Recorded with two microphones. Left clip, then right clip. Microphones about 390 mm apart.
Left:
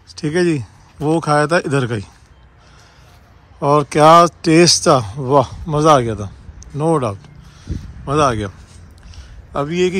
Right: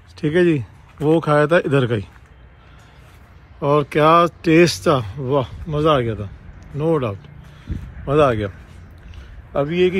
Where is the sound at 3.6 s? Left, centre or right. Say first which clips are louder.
Left 4 dB; centre.